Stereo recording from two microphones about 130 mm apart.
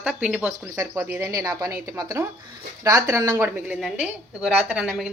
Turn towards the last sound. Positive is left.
turn(degrees=-5)  # may be behind; listen again after turning